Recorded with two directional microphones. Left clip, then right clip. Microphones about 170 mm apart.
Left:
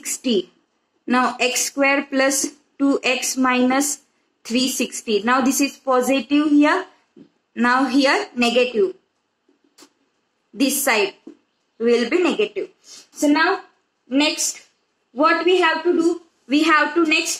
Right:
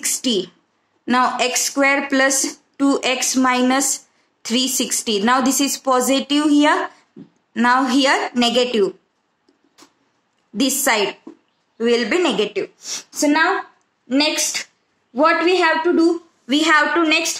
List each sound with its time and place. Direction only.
0.2 s speech: 40° right (ahead or behind)
10.5 s a woman's voice: 40° right (ahead or behind)